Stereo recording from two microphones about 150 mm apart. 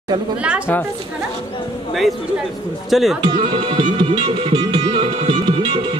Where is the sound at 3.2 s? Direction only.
35° right (ahead or behind).